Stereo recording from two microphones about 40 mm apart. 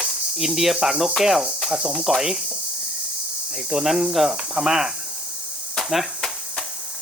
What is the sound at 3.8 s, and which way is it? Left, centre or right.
Cricket, centre.